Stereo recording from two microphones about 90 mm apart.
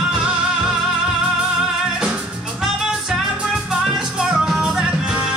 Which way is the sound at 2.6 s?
5° right (ahead or behind).